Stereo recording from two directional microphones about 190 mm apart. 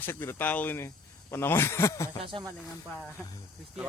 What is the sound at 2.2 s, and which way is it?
Speech, 25° right (ahead or behind).